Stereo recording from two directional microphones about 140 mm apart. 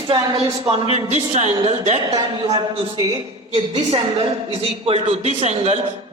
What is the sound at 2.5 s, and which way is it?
Speech, 30° right (ahead or behind).